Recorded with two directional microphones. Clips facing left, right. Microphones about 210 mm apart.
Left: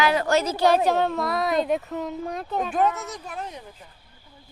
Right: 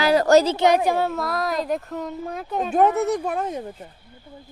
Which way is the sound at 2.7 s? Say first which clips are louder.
Right 8 dB; 60° right (ahead or behind).